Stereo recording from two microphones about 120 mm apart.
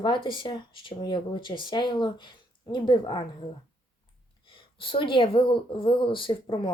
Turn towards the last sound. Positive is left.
turn(degrees=40)  # may be behind; listen again after turning